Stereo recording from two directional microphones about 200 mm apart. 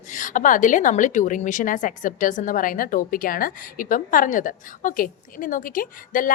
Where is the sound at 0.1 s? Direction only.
40° left (ahead or behind).